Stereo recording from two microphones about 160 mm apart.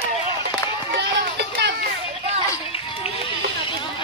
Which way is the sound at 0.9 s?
90° right.